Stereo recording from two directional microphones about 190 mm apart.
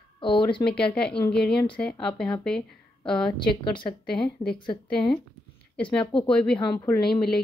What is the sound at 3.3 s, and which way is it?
A woman's voice, 25° left (ahead or behind).